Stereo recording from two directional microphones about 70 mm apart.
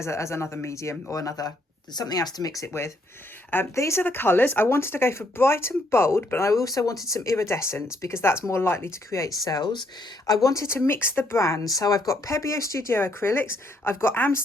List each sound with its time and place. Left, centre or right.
0.0 s speech: left
1.1 s speech: left
2.6 s speech: left
4.0 s speech: left
7.1 s speech: left